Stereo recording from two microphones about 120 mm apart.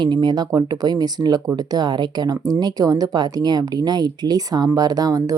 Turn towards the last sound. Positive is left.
turn(degrees=-30)  # may be behind; listen again after turning